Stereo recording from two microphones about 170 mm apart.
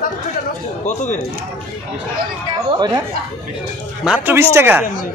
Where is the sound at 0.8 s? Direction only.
45° left (ahead or behind).